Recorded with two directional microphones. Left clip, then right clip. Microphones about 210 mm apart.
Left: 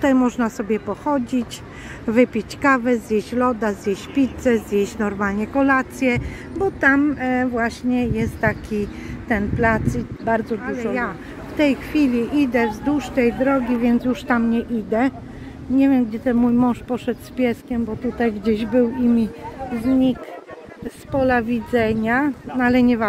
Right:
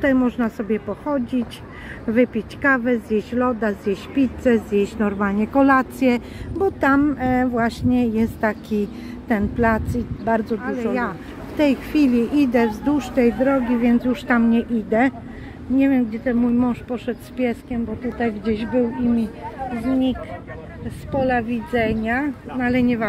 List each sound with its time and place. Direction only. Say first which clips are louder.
0.0 s a woman's voice: left 1 dB; 15° left (ahead or behind)
13.7 s speech: even; 10° left (ahead or behind); by 19.2 s 35° left (ahead or behind)
21.2 s speech: left 2 dB; 40° left (ahead or behind)